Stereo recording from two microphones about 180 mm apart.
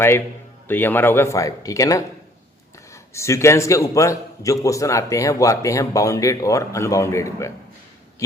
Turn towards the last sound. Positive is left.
turn(degrees=15)  # may be behind; listen again after turning